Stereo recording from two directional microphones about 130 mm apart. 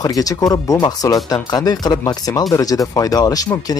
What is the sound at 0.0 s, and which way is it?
Speech, 25° left (ahead or behind).